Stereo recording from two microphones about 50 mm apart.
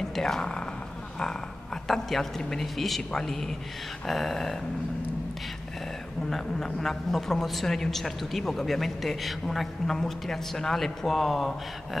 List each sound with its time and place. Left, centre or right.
0.1 s speech: centre
1.9 s a woman's voice: centre
6.3 s a woman's voice: centre